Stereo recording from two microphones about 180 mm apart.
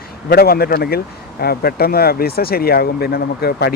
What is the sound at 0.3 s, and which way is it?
Speech, 60° left (ahead or behind).